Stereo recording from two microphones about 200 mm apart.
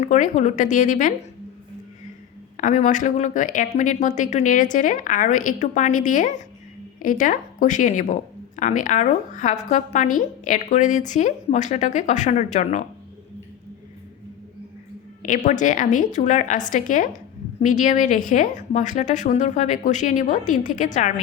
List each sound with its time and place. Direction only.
0.0 s speech: 40° left (ahead or behind)
2.6 s speech: 40° left (ahead or behind)
15.4 s speech: 40° left (ahead or behind)